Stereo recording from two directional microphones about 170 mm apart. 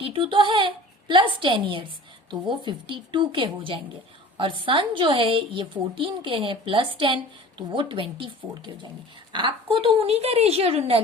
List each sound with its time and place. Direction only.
0.0 s a woman's voice: 30° right (ahead or behind)